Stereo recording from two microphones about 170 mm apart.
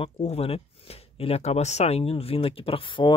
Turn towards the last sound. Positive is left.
turn(degrees=30)  # may be behind; listen again after turning